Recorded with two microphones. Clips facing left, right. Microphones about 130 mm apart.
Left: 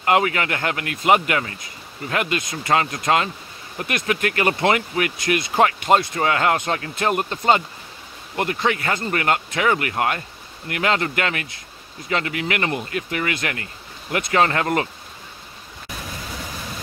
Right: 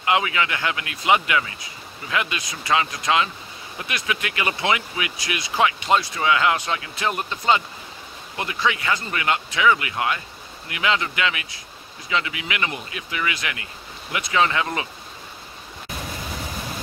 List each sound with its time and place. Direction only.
0.0 s speech: 45° left (ahead or behind)